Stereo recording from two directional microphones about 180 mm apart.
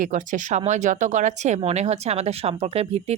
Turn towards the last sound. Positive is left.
turn(degrees=-35)  # may be behind; listen again after turning